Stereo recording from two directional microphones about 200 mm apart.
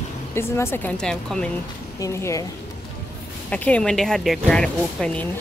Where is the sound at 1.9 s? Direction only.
15° left (ahead or behind).